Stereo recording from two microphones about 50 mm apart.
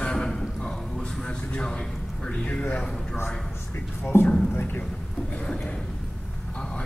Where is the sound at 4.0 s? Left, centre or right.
Left.